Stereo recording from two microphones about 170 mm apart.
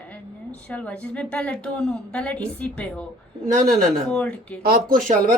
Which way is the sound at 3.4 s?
50° right (ahead or behind).